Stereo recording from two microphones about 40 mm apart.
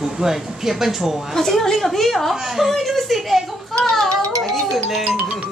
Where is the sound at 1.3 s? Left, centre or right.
Centre.